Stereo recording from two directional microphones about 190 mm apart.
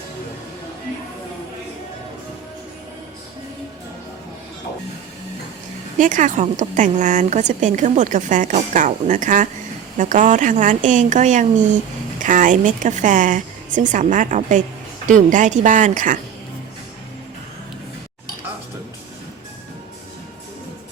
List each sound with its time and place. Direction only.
6.0 s a woman's voice: 40° right (ahead or behind)